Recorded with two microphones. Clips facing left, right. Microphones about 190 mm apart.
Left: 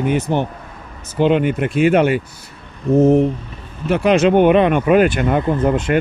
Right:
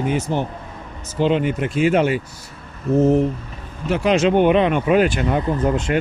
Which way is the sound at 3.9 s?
60° left (ahead or behind).